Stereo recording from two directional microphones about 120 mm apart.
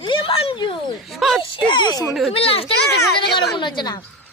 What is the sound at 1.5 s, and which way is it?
Speech, 40° left (ahead or behind).